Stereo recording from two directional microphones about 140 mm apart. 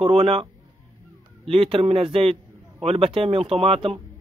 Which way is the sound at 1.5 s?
40° right (ahead or behind).